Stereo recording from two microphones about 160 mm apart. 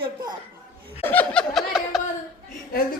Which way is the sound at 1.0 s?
10° left (ahead or behind).